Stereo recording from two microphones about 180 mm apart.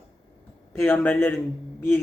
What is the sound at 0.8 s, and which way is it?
A man's voice, 10° left (ahead or behind).